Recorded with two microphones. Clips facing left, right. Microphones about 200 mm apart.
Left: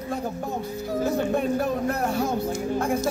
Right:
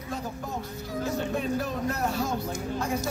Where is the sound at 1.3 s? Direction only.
55° left (ahead or behind).